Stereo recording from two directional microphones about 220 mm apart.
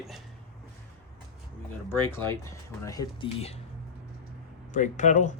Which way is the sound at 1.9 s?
10° left (ahead or behind).